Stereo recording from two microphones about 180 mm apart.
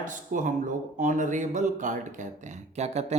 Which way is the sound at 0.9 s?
45° right (ahead or behind).